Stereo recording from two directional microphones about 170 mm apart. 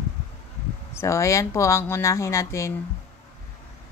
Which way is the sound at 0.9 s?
15° left (ahead or behind).